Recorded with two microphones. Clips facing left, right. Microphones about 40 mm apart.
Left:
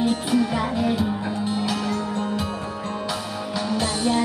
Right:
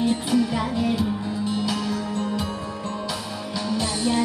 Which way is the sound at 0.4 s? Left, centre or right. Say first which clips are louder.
Left 1 dB; left.